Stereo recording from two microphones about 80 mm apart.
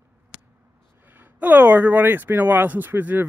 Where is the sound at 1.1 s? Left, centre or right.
Right.